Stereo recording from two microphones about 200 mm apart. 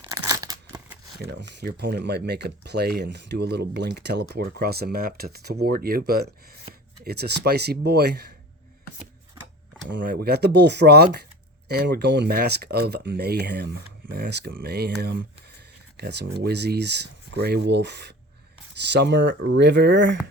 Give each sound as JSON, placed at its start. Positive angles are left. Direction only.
{"t": 0.0, "sound": "tearing", "side_deg": -20}
{"t": 1.2, "sound": "speech", "side_deg": -55}
{"t": 10.0, "sound": "speech", "side_deg": -50}